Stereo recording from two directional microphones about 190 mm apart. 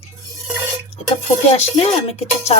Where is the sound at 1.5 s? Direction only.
35° left (ahead or behind).